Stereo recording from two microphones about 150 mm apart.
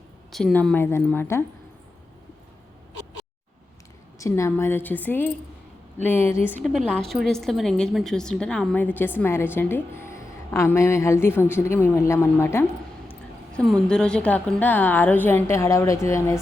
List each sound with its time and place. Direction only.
0.3 s a woman's voice: centre (ahead or behind)
4.2 s a woman's voice: 20° left (ahead or behind)
13.1 s a woman's voice: 5° left (ahead or behind)